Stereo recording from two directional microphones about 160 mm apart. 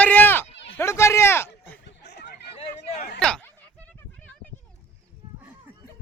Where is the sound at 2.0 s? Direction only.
90° left.